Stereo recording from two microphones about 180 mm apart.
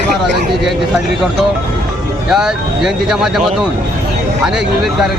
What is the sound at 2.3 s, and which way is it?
Speech, 5° right (ahead or behind).